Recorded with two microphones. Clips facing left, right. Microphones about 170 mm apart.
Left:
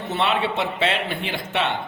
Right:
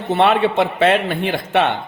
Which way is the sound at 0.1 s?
55° right (ahead or behind).